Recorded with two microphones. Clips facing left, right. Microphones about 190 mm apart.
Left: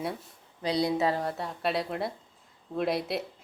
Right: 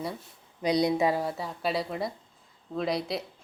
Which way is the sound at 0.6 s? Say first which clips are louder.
Right 2 dB; 15° right (ahead or behind).